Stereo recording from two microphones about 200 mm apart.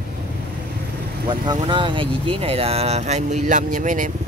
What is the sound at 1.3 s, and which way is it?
Speech, 25° right (ahead or behind).